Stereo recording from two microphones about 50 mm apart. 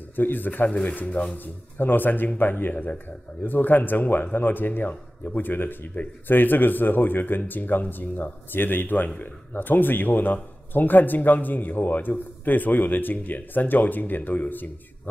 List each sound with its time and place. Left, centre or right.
0.1 s speech: left
2.7 s speech: left
3.4 s speech: left